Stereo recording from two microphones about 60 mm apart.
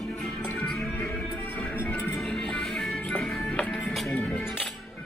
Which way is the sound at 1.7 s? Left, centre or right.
Left.